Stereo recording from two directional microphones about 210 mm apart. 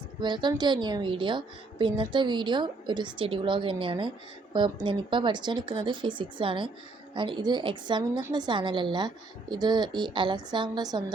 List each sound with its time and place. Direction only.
0.2 s a woman's voice: 20° right (ahead or behind)